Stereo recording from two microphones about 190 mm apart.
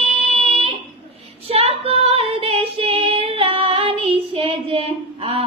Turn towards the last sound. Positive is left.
turn(degrees=-30)  # may be behind; listen again after turning